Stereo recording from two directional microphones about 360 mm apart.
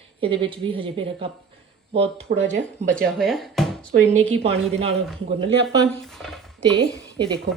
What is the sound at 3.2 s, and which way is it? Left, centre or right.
Speech, centre.